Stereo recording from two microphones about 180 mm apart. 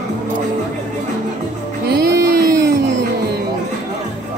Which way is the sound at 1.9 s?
60° right (ahead or behind).